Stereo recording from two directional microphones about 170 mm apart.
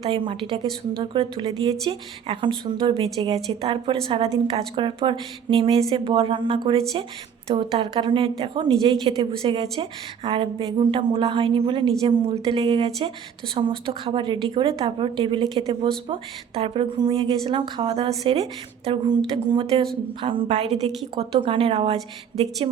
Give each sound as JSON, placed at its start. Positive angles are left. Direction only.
{"t": 0.1, "sound": "a woman's voice", "side_deg": -30}
{"t": 19.5, "sound": "a woman's voice", "side_deg": -30}